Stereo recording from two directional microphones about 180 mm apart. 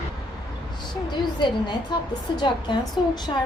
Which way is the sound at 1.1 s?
25° left (ahead or behind).